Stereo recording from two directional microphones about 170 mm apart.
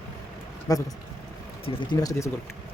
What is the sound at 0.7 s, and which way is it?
Speech, 20° left (ahead or behind).